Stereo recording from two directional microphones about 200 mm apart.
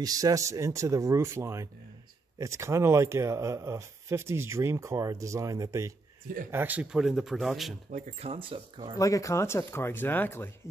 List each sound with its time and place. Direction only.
0.0 s speech: 15° right (ahead or behind); by 7.7 s centre (ahead or behind)
7.9 s speech: 30° right (ahead or behind)
8.9 s speech: 15° left (ahead or behind)